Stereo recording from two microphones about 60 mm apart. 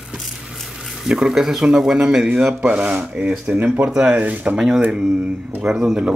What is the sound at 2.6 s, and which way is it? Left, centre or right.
Speech, right.